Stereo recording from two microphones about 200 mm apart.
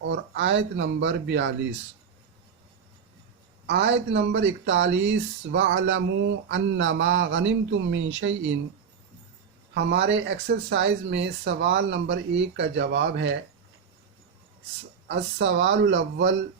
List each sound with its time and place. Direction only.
0.0 s speech: 65° right (ahead or behind)
3.7 s speech: 60° right (ahead or behind)
9.7 s speech: 60° right (ahead or behind)
15.0 s speech: 60° right (ahead or behind)